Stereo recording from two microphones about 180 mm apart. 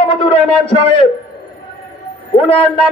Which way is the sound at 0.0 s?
30° left (ahead or behind).